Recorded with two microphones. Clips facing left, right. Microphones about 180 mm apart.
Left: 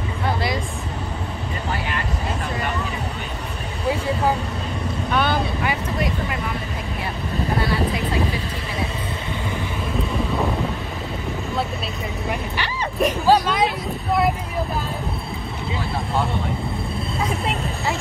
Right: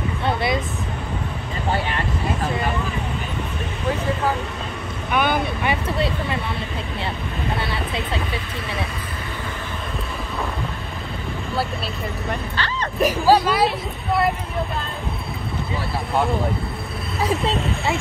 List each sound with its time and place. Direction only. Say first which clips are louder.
5.1 s vehicle: right 1 dB; 15° right (ahead or behind)
7.5 s vehicle: left 6 dB; 25° right (ahead or behind)
12.3 s vehicle: left 1 dB; 15° left (ahead or behind)
13.0 s vehicle: right 1 dB; 10° right (ahead or behind)
17.2 s a sound: right 4 dB; 30° right (ahead or behind)